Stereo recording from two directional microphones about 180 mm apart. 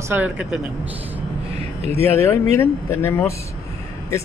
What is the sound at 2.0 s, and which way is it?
Speech, 15° left (ahead or behind).